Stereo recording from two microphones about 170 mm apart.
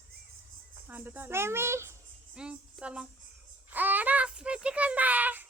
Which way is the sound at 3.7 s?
10° right (ahead or behind).